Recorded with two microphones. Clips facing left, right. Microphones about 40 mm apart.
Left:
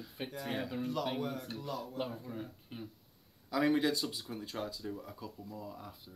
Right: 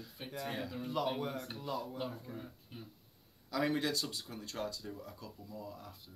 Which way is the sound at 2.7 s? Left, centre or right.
Left.